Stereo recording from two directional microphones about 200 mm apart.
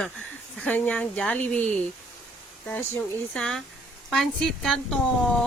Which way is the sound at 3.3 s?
5° left (ahead or behind).